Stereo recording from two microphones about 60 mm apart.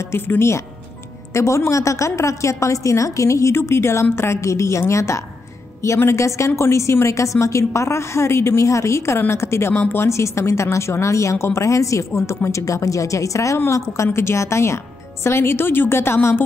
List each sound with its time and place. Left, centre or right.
0.3 s a woman's voice: left